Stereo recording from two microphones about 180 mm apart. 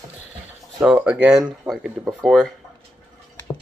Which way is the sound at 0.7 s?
5° right (ahead or behind).